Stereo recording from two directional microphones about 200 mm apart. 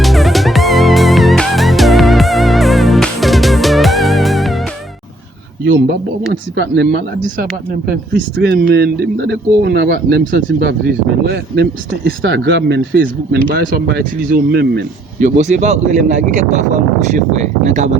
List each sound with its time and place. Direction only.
0.0 s music: centre (ahead or behind)
6.6 s speech: 55° right (ahead or behind)
15.2 s speech: 35° right (ahead or behind)